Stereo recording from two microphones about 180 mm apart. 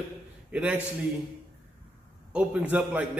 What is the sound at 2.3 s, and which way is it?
Speech, 5° right (ahead or behind).